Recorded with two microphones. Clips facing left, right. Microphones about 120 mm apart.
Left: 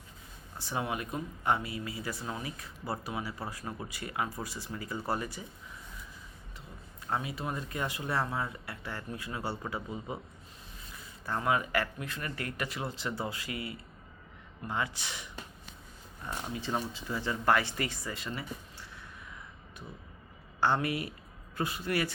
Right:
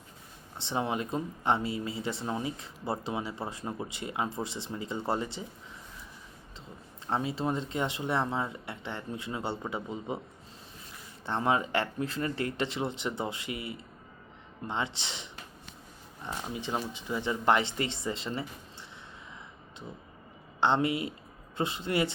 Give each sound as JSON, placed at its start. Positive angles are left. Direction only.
{"t": 0.5, "sound": "speech", "side_deg": -25}
{"t": 7.1, "sound": "speech", "side_deg": -30}
{"t": 11.3, "sound": "speech", "side_deg": -25}
{"t": 20.6, "sound": "speech", "side_deg": -25}